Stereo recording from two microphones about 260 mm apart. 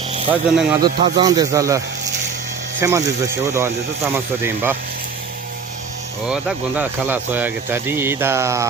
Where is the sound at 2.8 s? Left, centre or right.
Centre.